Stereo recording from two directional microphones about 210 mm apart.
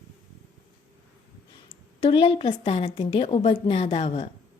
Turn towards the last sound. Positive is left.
turn(degrees=30)  # may be behind; listen again after turning